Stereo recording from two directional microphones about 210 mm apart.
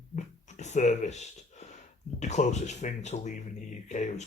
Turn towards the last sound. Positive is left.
turn(degrees=35)  # may be behind; listen again after turning